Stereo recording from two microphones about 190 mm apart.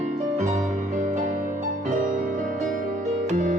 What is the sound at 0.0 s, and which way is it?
Music, 40° right (ahead or behind).